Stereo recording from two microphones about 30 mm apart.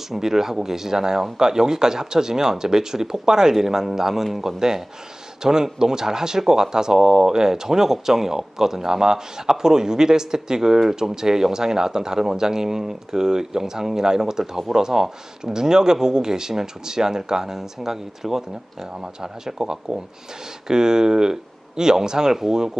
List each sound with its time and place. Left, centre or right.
0.1 s a man's voice: centre
5.4 s speech: right